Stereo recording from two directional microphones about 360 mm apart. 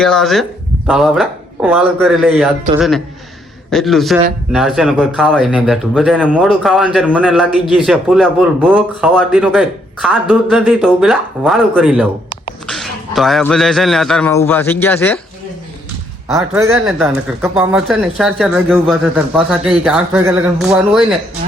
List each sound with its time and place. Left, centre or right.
0.0 s speech: centre
3.7 s a man's voice: centre
16.3 s speech: centre